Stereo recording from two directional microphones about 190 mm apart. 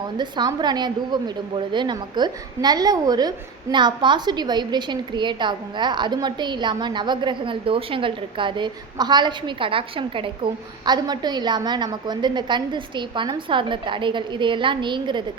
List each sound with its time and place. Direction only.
0.2 s a woman's voice: 25° right (ahead or behind)